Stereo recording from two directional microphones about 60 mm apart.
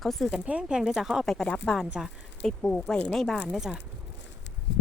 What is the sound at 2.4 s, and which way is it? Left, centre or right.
Speech, centre.